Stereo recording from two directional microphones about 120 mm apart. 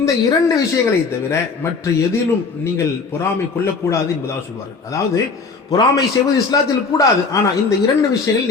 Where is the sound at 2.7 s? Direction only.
20° left (ahead or behind).